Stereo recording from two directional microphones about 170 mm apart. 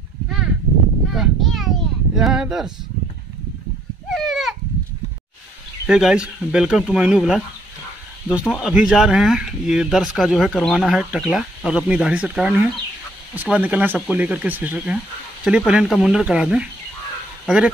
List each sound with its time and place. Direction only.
1.0 s a sound: centre (ahead or behind)
4.1 s goat: centre (ahead or behind)
5.9 s speech: 5° right (ahead or behind)